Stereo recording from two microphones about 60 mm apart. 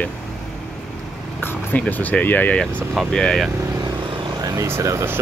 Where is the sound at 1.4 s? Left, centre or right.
Left.